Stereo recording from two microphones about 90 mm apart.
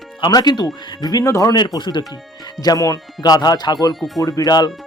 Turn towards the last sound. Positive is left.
turn(degrees=50)  # may be behind; listen again after turning